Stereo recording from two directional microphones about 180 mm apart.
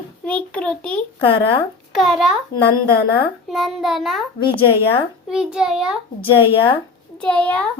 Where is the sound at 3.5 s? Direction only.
Centre (ahead or behind).